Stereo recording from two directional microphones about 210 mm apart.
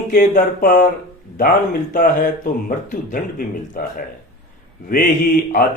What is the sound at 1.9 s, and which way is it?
Speech, 40° left (ahead or behind).